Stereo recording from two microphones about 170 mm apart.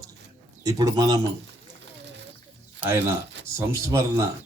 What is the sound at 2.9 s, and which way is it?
Speech, 15° right (ahead or behind).